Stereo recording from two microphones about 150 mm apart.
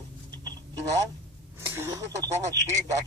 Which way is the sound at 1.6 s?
15° right (ahead or behind).